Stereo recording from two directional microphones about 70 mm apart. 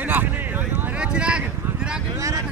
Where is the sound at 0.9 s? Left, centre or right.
Centre.